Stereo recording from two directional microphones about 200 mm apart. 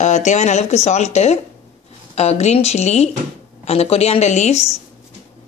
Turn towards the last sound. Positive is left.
turn(degrees=35)  # may be behind; listen again after turning